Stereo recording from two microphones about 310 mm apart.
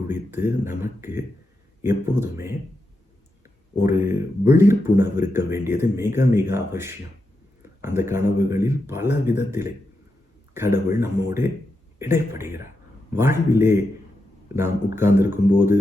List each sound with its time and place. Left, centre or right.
0.1 s speech: centre